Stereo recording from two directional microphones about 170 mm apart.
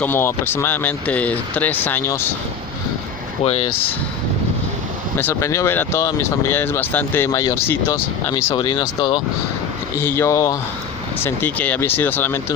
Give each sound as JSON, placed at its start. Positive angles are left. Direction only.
{"t": 0.0, "sound": "speech", "side_deg": 15}
{"t": 3.4, "sound": "speech", "side_deg": 35}
{"t": 5.1, "sound": "speech", "side_deg": 15}
{"t": 8.3, "sound": "speech", "side_deg": 30}
{"t": 10.0, "sound": "speech", "side_deg": 15}